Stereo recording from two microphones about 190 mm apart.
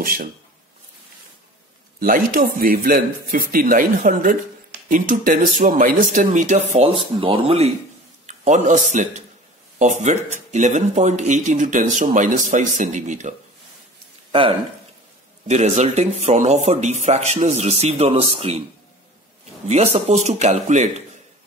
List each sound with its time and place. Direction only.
0.0 s speech: 50° right (ahead or behind)
2.0 s speech: 45° right (ahead or behind)
15.4 s speech: 35° right (ahead or behind)
19.7 s speech: 35° right (ahead or behind)